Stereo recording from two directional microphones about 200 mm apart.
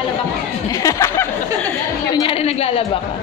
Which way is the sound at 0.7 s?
15° left (ahead or behind).